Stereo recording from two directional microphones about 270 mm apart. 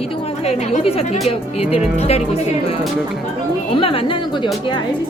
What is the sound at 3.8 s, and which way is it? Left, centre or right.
Speech, centre.